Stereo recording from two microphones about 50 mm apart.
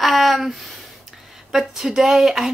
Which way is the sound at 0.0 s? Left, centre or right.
Centre.